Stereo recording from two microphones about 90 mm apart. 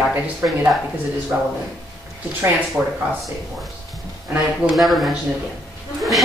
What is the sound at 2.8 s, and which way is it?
Speech, 10° right (ahead or behind).